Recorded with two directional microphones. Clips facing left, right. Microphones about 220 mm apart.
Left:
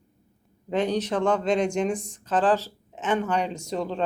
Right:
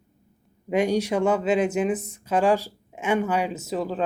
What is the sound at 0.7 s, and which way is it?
Speech, 10° right (ahead or behind).